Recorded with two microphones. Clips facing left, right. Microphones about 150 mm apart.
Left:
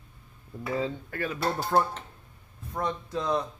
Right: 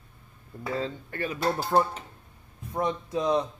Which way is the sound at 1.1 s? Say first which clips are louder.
Right 1 dB; centre (ahead or behind).